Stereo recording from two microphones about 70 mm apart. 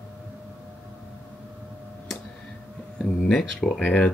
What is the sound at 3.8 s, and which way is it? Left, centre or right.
Speech, centre.